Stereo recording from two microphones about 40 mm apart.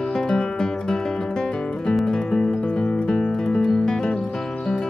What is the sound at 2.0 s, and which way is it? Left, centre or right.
Music, centre.